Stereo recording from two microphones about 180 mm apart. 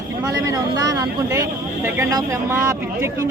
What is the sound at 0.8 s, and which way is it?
Speech, 20° right (ahead or behind).